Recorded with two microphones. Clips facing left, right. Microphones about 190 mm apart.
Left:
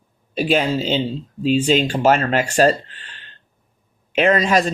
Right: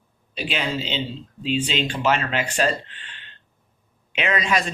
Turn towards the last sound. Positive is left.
turn(degrees=40)  # may be behind; listen again after turning